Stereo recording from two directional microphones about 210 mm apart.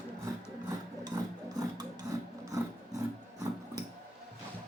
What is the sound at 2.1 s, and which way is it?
Filing, 15° right (ahead or behind).